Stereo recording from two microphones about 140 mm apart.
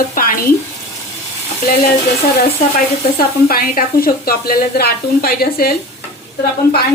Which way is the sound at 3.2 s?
90° left.